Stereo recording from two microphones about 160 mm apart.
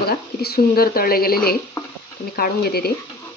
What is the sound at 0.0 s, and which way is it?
A woman's voice, 80° left.